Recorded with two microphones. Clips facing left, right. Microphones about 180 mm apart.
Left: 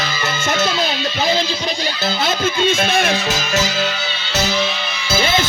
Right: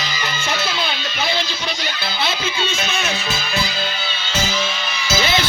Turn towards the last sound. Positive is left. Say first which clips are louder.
# left 2 dB
turn(degrees=50)  # may be behind; listen again after turning